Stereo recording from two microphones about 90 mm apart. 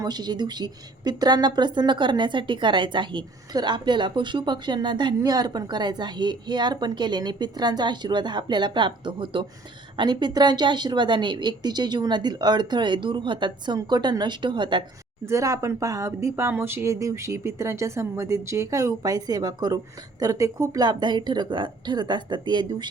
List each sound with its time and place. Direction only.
0.0 s a woman's voice: 50° right (ahead or behind); by 9.5 s 70° right (ahead or behind)
10.0 s a woman's voice: 55° right (ahead or behind)
13.9 s a woman's voice: 50° right (ahead or behind)
15.3 s speech: 35° right (ahead or behind); by 22.9 s 55° right (ahead or behind)